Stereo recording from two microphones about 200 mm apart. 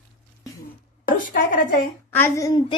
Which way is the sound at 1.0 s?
40° left (ahead or behind).